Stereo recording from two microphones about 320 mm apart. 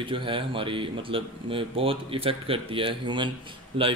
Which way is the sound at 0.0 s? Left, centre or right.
Centre.